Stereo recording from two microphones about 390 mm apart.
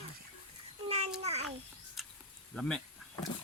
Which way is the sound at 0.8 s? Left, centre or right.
Centre.